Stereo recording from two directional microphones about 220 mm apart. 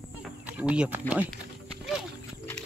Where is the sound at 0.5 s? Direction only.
5° right (ahead or behind).